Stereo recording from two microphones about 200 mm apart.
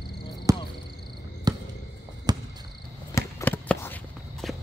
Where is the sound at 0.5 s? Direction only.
15° right (ahead or behind).